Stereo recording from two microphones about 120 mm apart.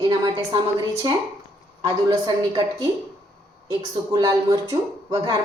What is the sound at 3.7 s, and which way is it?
Speech, 30° right (ahead or behind).